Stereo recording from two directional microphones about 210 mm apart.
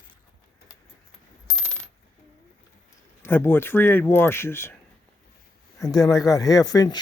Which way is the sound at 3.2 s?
10° left (ahead or behind).